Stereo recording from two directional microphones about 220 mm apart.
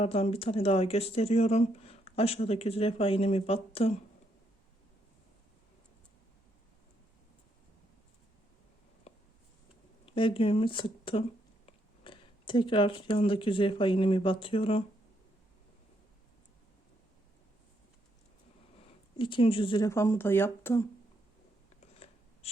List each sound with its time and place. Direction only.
0.0 s speech: 25° left (ahead or behind)
9.1 s a sound: 30° left (ahead or behind)
10.2 s speech: 25° left (ahead or behind)
19.1 s speech: 20° left (ahead or behind)
21.9 s scissors: 25° left (ahead or behind)